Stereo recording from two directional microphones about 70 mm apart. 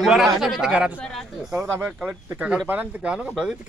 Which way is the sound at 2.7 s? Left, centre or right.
Right.